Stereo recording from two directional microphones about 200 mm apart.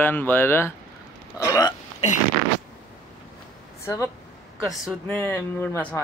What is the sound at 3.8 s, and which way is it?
Speech, 15° left (ahead or behind).